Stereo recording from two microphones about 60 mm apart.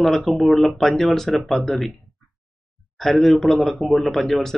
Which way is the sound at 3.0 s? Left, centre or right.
Centre.